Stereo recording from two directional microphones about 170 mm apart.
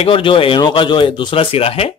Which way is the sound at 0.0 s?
30° left (ahead or behind).